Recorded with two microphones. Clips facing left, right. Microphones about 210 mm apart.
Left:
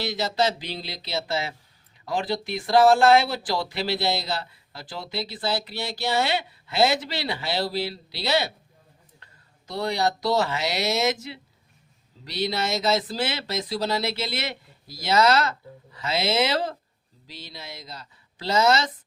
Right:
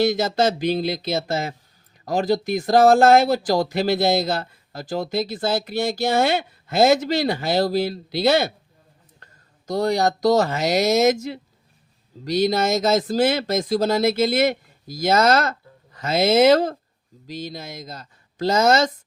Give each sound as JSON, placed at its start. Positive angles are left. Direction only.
{"t": 0.0, "sound": "speech", "side_deg": -50}